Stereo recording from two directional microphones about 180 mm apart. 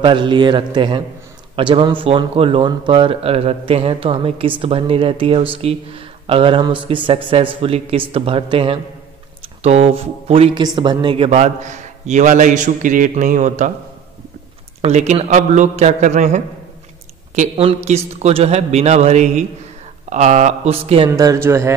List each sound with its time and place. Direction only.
0.0 s speech: 25° right (ahead or behind); by 13.7 s 40° right (ahead or behind)
14.8 s speech: 40° right (ahead or behind)
21.1 s speech: 20° right (ahead or behind)